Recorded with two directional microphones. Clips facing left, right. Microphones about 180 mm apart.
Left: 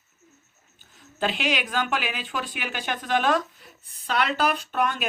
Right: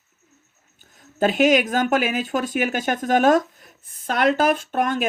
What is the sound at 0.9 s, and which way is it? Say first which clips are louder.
A woman's voice: right 9 dB; 45° right (ahead or behind).